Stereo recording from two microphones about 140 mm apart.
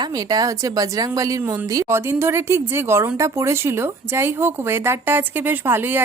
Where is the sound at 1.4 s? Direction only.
15° right (ahead or behind).